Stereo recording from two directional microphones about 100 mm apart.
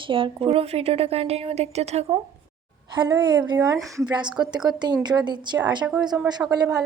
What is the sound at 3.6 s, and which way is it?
Speech, 35° right (ahead or behind).